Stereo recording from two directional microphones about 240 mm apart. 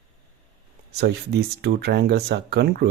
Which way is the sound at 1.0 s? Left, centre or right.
Right.